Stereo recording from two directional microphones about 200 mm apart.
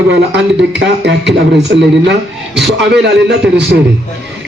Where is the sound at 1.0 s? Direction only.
60° right (ahead or behind).